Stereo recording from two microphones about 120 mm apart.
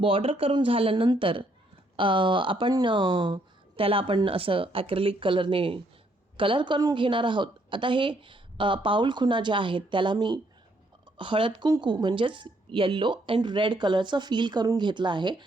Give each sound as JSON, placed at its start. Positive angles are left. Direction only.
{"t": 0.0, "sound": "a woman's voice", "side_deg": -50}